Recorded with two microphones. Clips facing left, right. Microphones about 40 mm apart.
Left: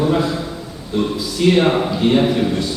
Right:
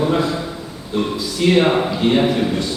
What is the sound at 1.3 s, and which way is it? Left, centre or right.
A man's voice, centre.